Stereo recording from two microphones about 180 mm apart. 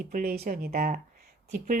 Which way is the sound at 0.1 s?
55° right (ahead or behind).